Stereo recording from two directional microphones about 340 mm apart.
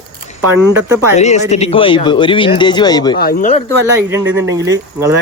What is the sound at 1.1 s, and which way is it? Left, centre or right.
Speech, centre.